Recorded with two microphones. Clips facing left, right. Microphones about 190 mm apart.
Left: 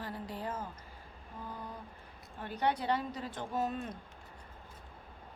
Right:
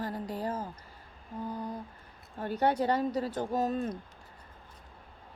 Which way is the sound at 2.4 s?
45° right (ahead or behind).